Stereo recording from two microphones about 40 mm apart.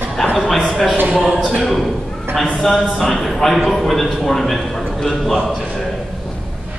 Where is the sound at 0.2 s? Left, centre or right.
Centre.